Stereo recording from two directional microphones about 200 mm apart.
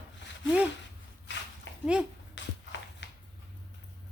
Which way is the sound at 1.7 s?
70° left (ahead or behind).